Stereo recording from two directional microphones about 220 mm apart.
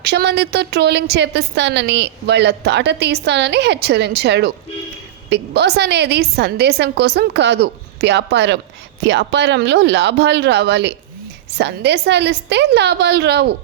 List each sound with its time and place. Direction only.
0.0 s a woman's voice: 50° right (ahead or behind)